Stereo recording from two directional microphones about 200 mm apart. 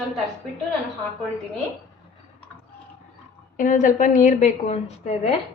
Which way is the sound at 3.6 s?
40° left (ahead or behind).